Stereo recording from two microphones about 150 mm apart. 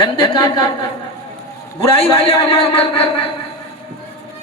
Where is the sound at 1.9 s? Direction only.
40° left (ahead or behind).